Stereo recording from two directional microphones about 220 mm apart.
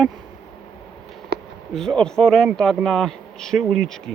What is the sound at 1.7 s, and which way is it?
A man's voice, 5° left (ahead or behind).